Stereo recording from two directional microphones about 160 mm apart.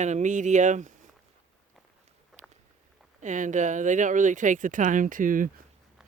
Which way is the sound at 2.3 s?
Centre (ahead or behind).